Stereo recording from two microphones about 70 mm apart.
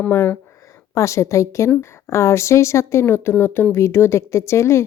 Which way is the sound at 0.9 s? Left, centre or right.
Left.